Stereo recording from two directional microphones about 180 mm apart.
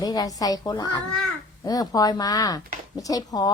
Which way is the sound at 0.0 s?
20° left (ahead or behind).